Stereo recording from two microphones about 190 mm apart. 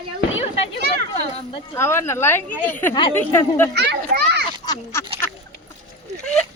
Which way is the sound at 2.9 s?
25° left (ahead or behind).